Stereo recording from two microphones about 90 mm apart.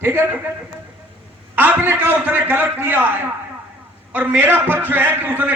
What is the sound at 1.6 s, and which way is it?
A man's voice, 20° right (ahead or behind).